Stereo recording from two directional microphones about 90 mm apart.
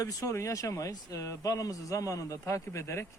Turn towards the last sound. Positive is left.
turn(degrees=30)  # may be behind; listen again after turning